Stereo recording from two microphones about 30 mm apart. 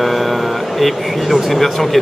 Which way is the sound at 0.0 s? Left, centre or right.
Centre.